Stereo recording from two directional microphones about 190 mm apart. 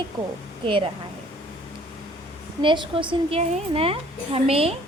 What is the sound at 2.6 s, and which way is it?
A woman's voice, 25° right (ahead or behind).